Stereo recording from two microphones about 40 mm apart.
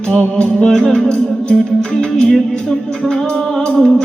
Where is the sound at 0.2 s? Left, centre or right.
Left.